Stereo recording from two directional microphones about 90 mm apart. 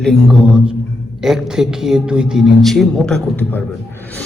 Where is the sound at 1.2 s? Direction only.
5° right (ahead or behind).